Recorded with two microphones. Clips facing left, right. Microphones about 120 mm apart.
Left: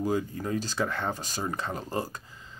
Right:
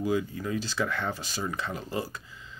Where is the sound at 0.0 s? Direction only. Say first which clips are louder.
Even; 40° left (ahead or behind).